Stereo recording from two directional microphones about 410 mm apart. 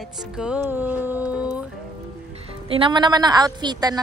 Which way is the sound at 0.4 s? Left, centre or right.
Centre.